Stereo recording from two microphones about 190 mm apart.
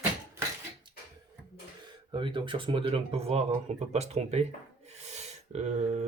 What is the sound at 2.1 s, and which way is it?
Speech, 25° right (ahead or behind).